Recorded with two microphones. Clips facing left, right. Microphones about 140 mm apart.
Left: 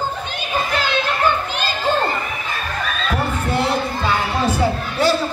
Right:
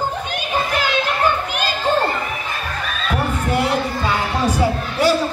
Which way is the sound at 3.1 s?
15° right (ahead or behind).